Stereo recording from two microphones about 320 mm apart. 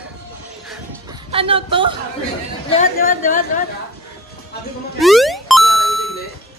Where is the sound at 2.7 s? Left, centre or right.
Left.